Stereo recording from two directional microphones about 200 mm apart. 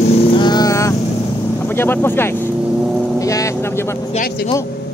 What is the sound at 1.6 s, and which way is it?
Speech, 10° left (ahead or behind).